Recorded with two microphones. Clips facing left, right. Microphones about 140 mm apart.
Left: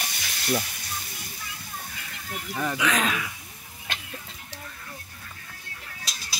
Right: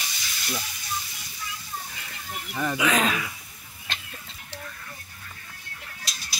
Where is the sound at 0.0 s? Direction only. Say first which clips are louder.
Left 3 dB; 55° left (ahead or behind).